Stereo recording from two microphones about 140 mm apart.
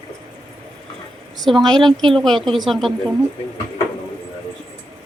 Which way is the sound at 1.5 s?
40° right (ahead or behind).